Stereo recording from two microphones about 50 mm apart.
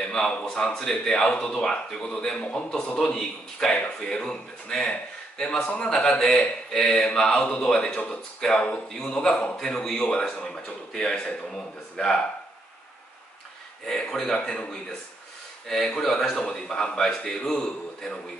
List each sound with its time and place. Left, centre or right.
0.0 s a man's voice: centre
6.1 s a man's voice: centre
7.1 s a man's voice: centre
7.6 s speech: centre
7.9 s a man's voice: left
8.4 s speech: centre
13.8 s speech: centre